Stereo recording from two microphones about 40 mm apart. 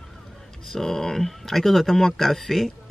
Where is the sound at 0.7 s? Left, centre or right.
Centre.